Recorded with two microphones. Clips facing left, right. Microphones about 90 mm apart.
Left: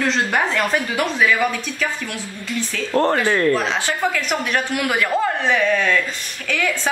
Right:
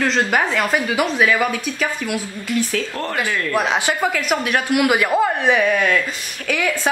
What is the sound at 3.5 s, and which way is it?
Speech, 15° right (ahead or behind).